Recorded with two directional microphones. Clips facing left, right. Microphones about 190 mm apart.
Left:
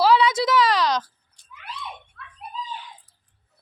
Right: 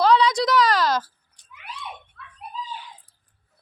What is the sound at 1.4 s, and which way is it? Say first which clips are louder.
Cat: left 2 dB; 15° right (ahead or behind).